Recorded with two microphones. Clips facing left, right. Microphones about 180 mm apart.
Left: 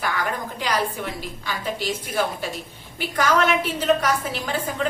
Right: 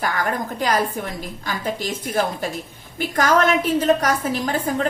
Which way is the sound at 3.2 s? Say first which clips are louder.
Right 3 dB; 45° right (ahead or behind).